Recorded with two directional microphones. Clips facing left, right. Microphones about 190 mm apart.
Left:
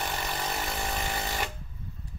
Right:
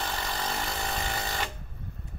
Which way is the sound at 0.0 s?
15° left (ahead or behind).